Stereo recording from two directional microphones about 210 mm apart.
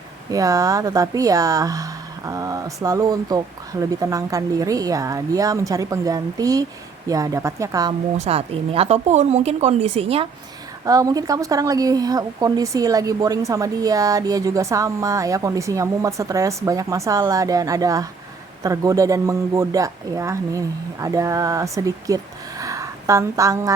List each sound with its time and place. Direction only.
0.3 s a woman's voice: 15° right (ahead or behind)
8.2 s speech: 30° right (ahead or behind)
10.8 s a woman's voice: 15° right (ahead or behind)